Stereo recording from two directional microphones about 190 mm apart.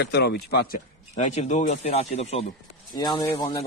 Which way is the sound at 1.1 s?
35° left (ahead or behind).